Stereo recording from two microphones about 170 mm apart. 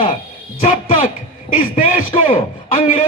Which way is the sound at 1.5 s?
50° left (ahead or behind).